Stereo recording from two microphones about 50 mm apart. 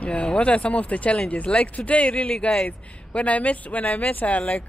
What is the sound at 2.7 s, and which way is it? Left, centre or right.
Speech, left.